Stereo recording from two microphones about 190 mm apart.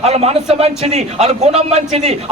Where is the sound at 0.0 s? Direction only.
35° right (ahead or behind).